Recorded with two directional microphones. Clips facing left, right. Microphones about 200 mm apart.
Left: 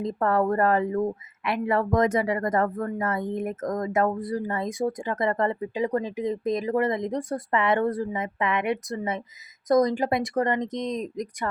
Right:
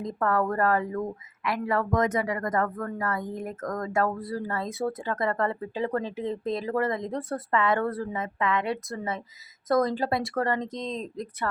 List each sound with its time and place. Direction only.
0.0 s speech: 25° left (ahead or behind)